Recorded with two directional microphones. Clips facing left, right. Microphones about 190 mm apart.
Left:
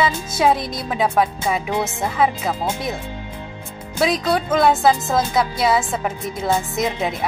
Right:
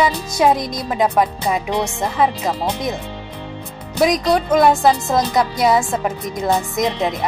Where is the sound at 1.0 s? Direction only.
10° left (ahead or behind).